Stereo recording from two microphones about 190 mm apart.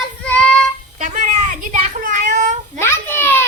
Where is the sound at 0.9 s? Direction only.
40° right (ahead or behind).